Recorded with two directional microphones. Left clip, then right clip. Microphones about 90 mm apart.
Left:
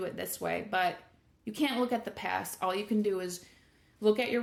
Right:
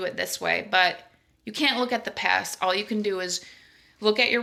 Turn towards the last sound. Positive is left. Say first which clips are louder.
# right 6 dB
turn(degrees=30)  # may be behind; listen again after turning